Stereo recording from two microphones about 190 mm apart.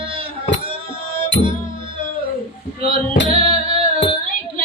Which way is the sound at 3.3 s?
30° right (ahead or behind).